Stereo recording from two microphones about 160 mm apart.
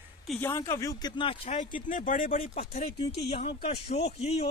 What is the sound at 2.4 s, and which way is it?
Speech, 45° left (ahead or behind).